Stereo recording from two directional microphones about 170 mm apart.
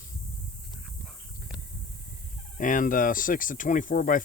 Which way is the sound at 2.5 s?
50° left (ahead or behind).